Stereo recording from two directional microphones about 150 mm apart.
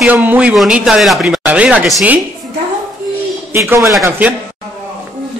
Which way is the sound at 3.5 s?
15° right (ahead or behind).